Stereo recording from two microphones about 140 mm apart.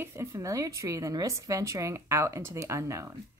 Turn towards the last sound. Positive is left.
turn(degrees=-20)  # may be behind; listen again after turning